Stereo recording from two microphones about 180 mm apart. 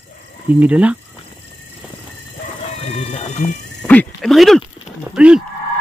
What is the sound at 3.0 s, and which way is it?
Cat, 35° left (ahead or behind).